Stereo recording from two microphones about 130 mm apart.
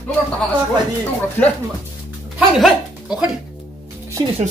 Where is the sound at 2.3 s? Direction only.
5° right (ahead or behind).